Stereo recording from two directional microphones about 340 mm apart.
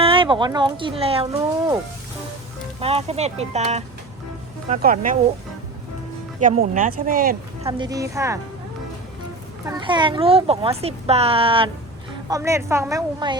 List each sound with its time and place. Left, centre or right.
0.0 s speech: centre
2.8 s speech: centre
6.4 s speech: right
7.7 s speech: centre
9.6 s speech: centre